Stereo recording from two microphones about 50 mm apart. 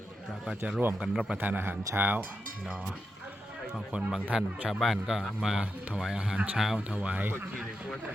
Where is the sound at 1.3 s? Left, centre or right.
Right.